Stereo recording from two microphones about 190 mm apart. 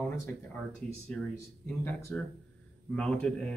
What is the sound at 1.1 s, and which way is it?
Speech, 5° left (ahead or behind).